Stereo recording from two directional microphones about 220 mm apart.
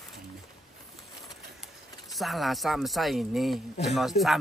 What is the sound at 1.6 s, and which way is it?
Speech, centre (ahead or behind).